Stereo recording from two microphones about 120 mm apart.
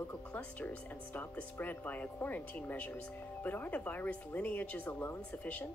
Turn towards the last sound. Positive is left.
turn(degrees=10)  # may be behind; listen again after turning